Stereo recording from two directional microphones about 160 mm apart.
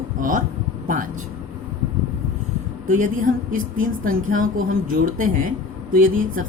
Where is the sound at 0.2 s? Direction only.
55° right (ahead or behind).